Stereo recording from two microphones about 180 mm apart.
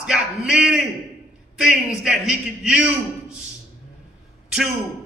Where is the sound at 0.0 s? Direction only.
5° right (ahead or behind).